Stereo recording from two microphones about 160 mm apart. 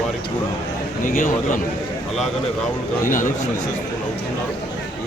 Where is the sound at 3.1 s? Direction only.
55° left (ahead or behind).